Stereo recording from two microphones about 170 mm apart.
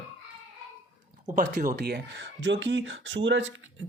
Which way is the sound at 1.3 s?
50° right (ahead or behind).